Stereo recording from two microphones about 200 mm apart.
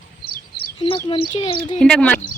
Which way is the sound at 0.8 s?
25° left (ahead or behind).